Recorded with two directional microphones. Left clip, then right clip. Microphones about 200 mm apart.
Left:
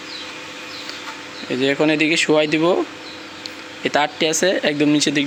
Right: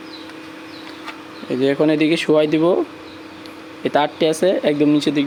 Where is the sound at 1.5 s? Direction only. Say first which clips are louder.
Right 1 dB; 15° right (ahead or behind).